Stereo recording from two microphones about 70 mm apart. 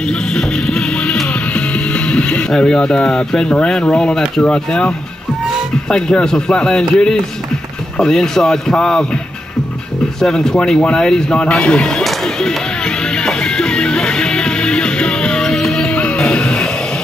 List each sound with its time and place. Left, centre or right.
0.3 s music: centre
1.5 s speech: centre
10.2 s speech: centre
12.0 s music: centre
15.9 s music: centre